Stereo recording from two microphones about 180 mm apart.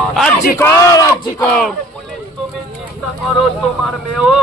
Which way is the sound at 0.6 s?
20° left (ahead or behind).